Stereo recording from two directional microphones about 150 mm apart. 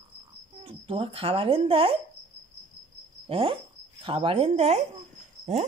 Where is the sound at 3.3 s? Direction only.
40° right (ahead or behind).